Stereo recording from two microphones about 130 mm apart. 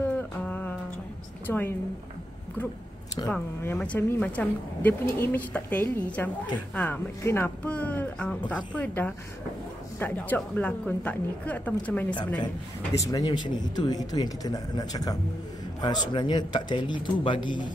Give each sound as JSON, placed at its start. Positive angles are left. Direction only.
{"t": 0.0, "sound": "a sound", "side_deg": 10}
{"t": 1.5, "sound": "a woman's voice", "side_deg": 15}
{"t": 3.3, "sound": "a woman's voice", "side_deg": 10}
{"t": 12.9, "sound": "speech", "side_deg": 25}